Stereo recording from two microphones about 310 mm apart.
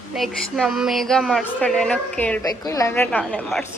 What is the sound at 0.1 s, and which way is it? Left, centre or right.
A woman's voice, centre.